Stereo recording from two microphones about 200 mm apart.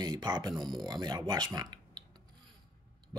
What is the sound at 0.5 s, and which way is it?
Speech, centre (ahead or behind).